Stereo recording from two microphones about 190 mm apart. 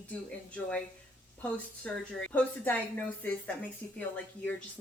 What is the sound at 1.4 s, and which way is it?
A woman's voice, 10° left (ahead or behind).